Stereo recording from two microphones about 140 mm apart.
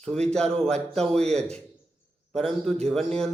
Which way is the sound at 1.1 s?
50° right (ahead or behind).